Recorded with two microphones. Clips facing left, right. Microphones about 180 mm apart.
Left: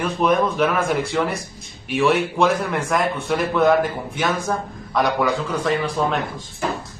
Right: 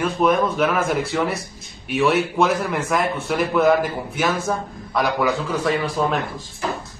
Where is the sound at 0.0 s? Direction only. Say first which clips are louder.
Even; centre (ahead or behind).